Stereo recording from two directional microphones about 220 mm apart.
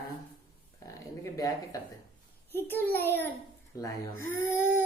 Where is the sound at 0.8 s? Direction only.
15° left (ahead or behind).